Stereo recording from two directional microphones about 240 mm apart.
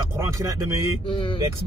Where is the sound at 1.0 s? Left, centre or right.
Left.